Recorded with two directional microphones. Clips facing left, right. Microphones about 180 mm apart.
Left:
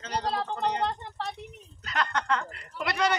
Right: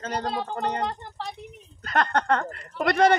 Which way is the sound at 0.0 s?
50° right (ahead or behind).